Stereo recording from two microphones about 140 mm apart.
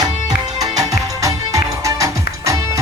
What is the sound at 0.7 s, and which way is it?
Music, 25° right (ahead or behind).